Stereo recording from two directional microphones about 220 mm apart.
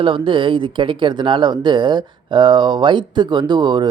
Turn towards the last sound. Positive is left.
turn(degrees=-20)  # may be behind; listen again after turning